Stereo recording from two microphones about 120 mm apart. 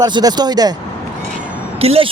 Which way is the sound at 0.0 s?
35° right (ahead or behind).